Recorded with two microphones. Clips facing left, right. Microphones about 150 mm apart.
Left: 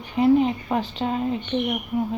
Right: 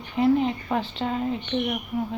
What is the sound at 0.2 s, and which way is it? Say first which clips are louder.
A woman's voice: left 3 dB; 10° left (ahead or behind).